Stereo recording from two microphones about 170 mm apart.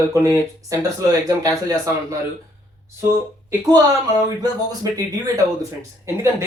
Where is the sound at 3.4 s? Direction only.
20° right (ahead or behind).